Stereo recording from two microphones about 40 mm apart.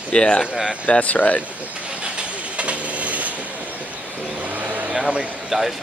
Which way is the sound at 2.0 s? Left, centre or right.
Right.